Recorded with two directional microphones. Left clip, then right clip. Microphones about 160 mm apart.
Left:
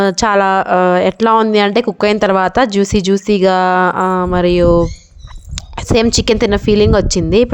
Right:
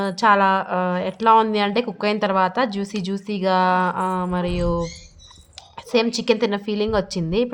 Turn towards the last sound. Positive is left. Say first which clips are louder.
# left 11 dB
turn(degrees=50)  # may be behind; listen again after turning